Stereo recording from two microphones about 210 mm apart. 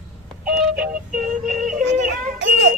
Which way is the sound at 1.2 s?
40° right (ahead or behind).